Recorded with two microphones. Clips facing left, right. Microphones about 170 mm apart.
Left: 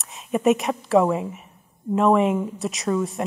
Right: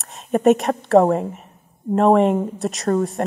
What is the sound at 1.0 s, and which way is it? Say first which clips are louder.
Speech: right 4 dB; 40° right (ahead or behind).